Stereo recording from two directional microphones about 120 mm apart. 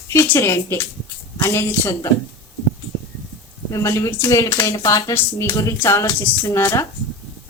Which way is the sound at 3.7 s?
25° left (ahead or behind).